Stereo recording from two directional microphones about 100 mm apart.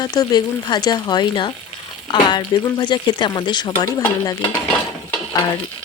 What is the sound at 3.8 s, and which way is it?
Speech, 40° left (ahead or behind).